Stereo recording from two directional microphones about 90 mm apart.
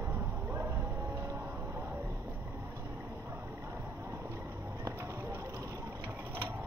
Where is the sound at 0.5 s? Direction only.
30° right (ahead or behind).